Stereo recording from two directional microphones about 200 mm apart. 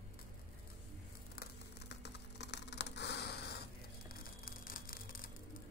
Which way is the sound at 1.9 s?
60° left (ahead or behind).